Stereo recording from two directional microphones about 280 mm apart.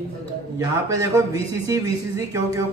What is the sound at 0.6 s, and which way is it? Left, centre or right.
A man's voice, centre.